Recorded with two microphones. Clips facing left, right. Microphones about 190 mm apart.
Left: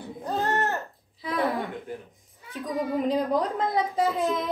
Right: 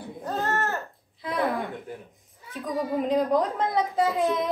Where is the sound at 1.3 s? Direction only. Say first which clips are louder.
Even; centre (ahead or behind).